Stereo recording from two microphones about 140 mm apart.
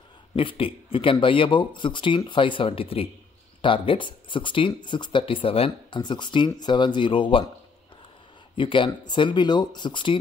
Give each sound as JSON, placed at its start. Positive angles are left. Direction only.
{"t": 0.4, "sound": "speech", "side_deg": 40}
{"t": 8.5, "sound": "speech", "side_deg": 35}